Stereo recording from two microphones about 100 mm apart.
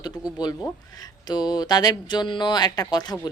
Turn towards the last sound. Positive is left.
turn(degrees=45)  # may be behind; listen again after turning